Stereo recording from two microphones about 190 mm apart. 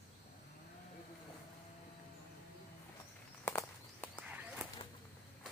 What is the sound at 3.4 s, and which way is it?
Walk, 10° left (ahead or behind).